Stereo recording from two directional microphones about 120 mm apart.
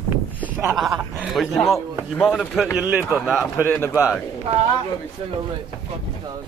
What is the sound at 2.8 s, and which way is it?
Speech, 15° right (ahead or behind).